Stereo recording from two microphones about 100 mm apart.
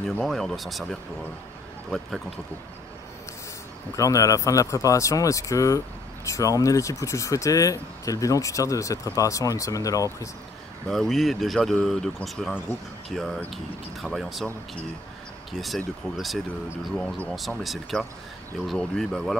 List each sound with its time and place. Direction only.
0.2 s speech: 5° left (ahead or behind)
3.9 s speech: 35° left (ahead or behind)
10.9 s speech: centre (ahead or behind)
15.5 s speech: centre (ahead or behind)